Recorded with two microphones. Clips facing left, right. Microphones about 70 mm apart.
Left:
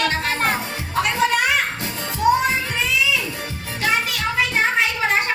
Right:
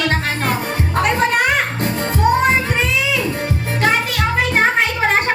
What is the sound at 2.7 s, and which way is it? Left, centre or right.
Music, right.